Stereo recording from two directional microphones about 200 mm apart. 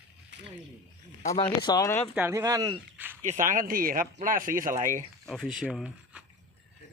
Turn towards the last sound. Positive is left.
turn(degrees=-5)  # may be behind; listen again after turning